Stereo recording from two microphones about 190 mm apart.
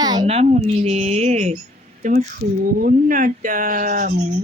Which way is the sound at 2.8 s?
45° right (ahead or behind).